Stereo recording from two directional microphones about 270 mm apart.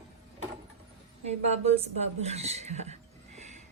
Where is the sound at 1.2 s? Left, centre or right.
Right.